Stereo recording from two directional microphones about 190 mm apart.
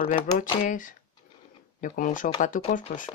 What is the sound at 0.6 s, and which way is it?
Speech, 45° left (ahead or behind).